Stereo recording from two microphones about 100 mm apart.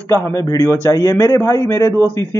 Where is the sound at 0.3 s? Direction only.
35° left (ahead or behind).